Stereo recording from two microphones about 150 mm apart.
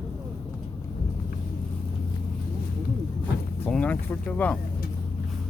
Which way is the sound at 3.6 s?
10° left (ahead or behind).